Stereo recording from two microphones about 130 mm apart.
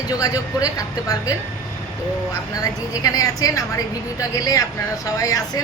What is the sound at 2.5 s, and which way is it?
A woman's voice, 25° left (ahead or behind).